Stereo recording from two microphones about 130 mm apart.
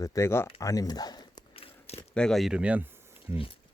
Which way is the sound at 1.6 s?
50° left (ahead or behind).